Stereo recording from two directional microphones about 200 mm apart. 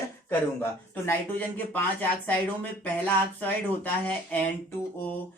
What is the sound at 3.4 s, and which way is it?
Speech, 10° left (ahead or behind).